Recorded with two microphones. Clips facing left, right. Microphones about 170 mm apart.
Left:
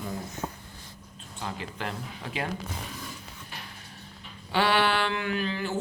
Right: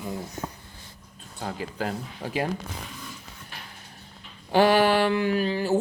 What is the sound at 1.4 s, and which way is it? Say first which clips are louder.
Speech: right 4 dB; 40° right (ahead or behind).